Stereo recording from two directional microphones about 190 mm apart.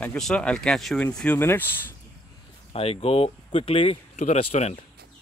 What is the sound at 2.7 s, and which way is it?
Speech, 30° left (ahead or behind).